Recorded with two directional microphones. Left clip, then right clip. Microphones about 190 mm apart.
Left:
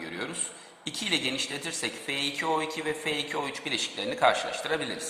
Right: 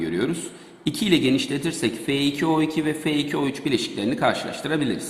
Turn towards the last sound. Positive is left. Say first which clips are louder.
# right 3 dB
turn(degrees=-10)  # may be behind; listen again after turning